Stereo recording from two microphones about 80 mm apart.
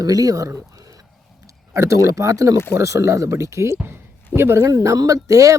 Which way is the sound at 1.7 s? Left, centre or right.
Right.